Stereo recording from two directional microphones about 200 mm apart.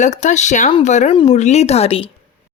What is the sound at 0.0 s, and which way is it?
A woman's voice, 35° left (ahead or behind).